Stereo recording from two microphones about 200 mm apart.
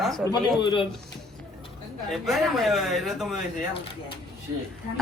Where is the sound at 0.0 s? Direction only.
Centre (ahead or behind).